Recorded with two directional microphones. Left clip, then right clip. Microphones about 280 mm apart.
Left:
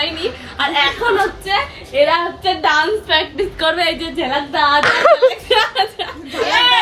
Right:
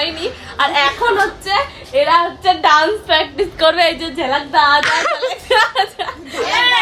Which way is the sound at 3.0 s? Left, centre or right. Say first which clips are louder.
Right 1 dB; right.